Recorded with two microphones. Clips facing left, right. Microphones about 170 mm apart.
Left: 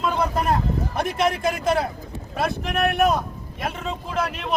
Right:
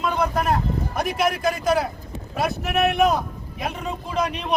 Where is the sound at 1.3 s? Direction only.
25° left (ahead or behind).